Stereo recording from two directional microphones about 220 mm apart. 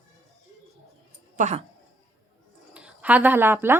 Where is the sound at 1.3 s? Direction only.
35° right (ahead or behind).